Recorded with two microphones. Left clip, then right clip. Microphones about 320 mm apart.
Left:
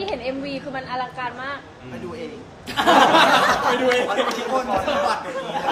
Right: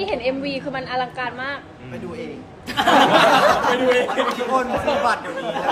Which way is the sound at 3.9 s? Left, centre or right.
Centre.